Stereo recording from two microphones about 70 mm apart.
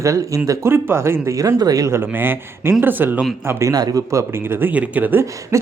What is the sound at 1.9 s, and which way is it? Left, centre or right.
A man's voice, right.